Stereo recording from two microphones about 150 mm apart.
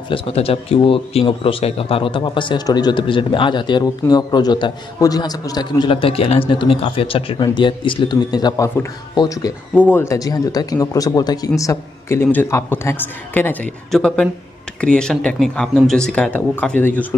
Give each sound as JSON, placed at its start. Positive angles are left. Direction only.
{"t": 0.1, "sound": "a man's voice", "side_deg": 40}
{"t": 9.8, "sound": "speech", "side_deg": 10}